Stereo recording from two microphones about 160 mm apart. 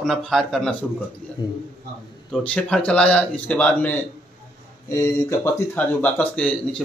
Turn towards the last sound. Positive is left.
turn(degrees=10)  # may be behind; listen again after turning